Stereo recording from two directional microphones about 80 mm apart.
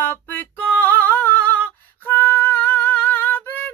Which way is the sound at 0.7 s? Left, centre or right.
Left.